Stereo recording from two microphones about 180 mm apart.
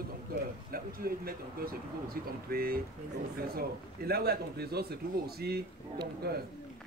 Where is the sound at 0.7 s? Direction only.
55° right (ahead or behind).